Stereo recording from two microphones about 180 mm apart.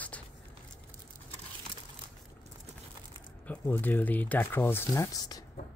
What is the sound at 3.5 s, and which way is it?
Speech, 10° left (ahead or behind).